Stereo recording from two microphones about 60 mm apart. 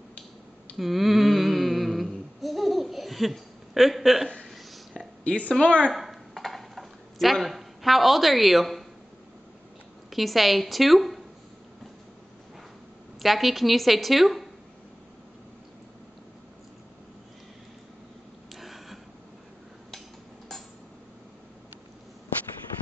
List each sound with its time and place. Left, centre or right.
0.7 s a sound: centre
5.2 s speech: left
5.9 s dishes: centre
10.0 s a woman's voice: centre
13.2 s a woman's voice: centre
18.5 s a sound: centre